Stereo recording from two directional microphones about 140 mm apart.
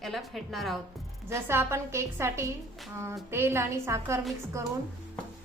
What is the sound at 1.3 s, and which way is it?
Speech, 15° right (ahead or behind).